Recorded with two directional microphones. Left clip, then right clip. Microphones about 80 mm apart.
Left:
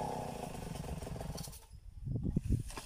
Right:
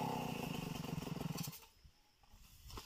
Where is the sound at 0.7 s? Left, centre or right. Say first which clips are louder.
Left 1 dB; centre.